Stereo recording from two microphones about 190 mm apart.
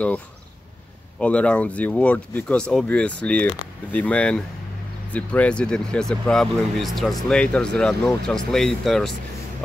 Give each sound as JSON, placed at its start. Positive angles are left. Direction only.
{"t": 1.2, "sound": "speech", "side_deg": 5}